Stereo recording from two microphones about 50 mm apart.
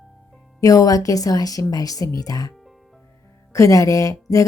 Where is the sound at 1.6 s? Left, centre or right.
Left.